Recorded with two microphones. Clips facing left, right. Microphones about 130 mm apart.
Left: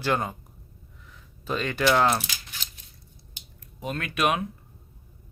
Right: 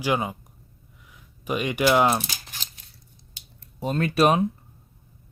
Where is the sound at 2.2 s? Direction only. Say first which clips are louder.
Right 1 dB; 40° right (ahead or behind).